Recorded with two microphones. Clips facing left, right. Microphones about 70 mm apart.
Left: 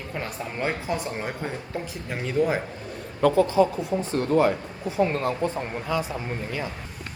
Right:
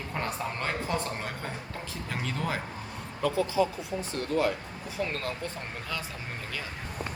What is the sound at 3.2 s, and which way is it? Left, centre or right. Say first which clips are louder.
Speech: left 9 dB; left.